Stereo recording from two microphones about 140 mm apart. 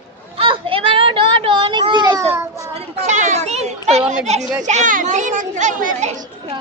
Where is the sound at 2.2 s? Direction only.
15° right (ahead or behind).